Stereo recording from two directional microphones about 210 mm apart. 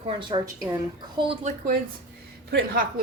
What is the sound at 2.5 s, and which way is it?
Speech, 45° right (ahead or behind).